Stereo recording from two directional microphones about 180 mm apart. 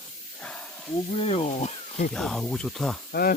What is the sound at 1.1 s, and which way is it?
Speech, 35° left (ahead or behind).